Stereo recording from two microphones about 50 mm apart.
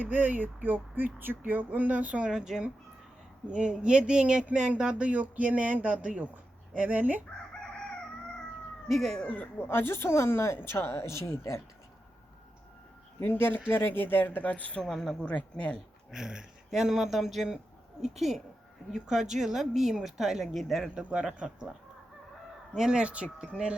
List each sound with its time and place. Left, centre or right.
0.0 s speech: right
2.3 s speech: centre; by 7.2 s right
8.9 s speech: centre
9.2 s speech: left
9.6 s speech: left
13.1 s speech: left
14.8 s speech: centre
15.2 s speech: left
16.1 s speech: centre
20.9 s speech: right
23.0 s speech: right